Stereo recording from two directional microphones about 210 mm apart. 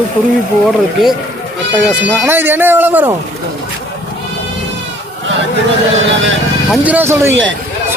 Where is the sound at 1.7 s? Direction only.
5° right (ahead or behind).